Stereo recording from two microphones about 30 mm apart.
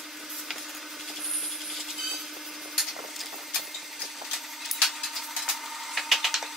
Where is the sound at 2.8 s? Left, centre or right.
Centre.